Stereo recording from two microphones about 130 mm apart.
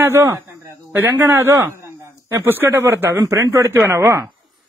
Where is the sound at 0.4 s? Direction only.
25° right (ahead or behind).